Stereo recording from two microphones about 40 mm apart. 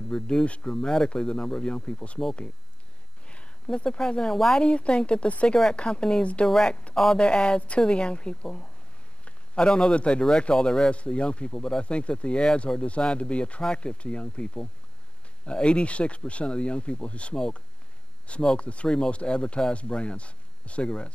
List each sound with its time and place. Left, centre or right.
0.1 s speech: centre
3.7 s speech: left
11.8 s speech: left